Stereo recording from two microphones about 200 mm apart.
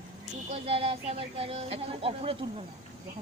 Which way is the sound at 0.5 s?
30° right (ahead or behind).